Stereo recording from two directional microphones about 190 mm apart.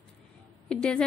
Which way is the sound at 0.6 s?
5° left (ahead or behind).